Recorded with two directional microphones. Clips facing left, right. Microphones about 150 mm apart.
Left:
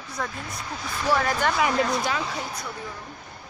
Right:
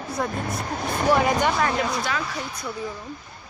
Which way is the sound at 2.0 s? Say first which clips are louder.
Even; 20° left (ahead or behind).